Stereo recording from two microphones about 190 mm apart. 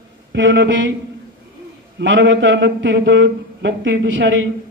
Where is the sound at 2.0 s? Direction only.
75° right (ahead or behind).